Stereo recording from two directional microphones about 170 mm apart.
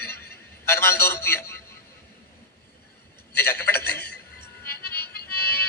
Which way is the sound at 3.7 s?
10° left (ahead or behind).